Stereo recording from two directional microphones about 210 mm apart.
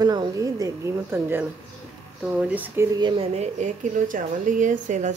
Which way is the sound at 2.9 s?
25° right (ahead or behind).